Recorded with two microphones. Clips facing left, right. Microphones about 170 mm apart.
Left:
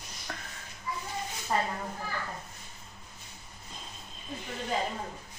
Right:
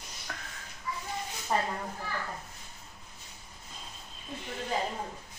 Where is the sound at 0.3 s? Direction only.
5° left (ahead or behind).